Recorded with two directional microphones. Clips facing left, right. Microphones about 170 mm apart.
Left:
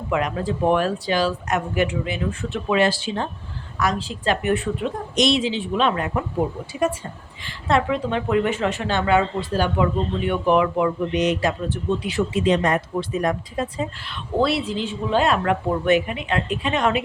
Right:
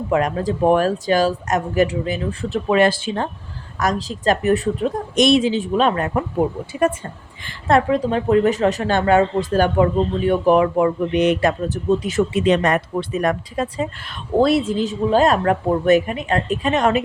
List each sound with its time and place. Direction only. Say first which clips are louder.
0.1 s speech: right 3 dB; 40° right (ahead or behind)
5.1 s a woman's voice: right 5 dB; 50° right (ahead or behind)
7.4 s a woman's voice: right 4 dB; 50° right (ahead or behind)
11.9 s a woman's voice: right 6 dB; 45° right (ahead or behind)
12.3 s speech: right 1 dB; 65° right (ahead or behind)
14.1 s a woman's voice: right 6 dB; 45° right (ahead or behind)